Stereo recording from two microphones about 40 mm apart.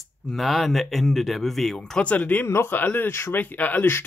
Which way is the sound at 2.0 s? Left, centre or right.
Left.